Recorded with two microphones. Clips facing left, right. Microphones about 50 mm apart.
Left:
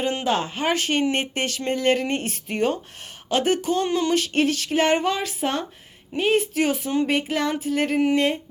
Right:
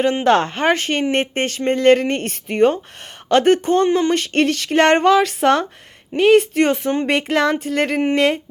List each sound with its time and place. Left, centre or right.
0.3 s a woman's voice: right
6.5 s speech: right
8.1 s a sound: right